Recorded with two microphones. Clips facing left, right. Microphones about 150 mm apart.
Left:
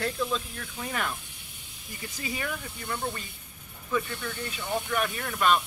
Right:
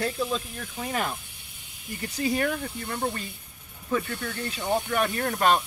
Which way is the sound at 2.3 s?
50° right (ahead or behind).